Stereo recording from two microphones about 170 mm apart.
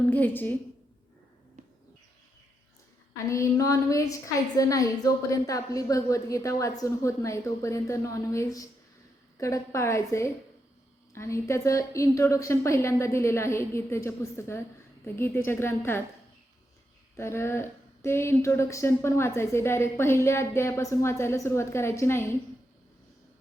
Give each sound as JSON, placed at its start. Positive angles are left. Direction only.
{"t": 0.1, "sound": "speech", "side_deg": 10}
{"t": 1.6, "sound": "bird", "side_deg": -45}
{"t": 3.2, "sound": "a woman's voice", "side_deg": 20}
{"t": 17.2, "sound": "speech", "side_deg": 15}